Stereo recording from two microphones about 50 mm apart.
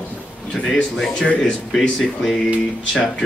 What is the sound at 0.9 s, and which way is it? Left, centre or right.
Speech, centre.